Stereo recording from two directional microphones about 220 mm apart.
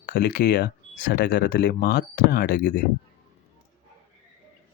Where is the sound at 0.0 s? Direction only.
40° left (ahead or behind).